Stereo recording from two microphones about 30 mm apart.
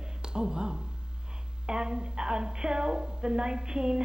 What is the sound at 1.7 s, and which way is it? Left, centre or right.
A woman's voice, right.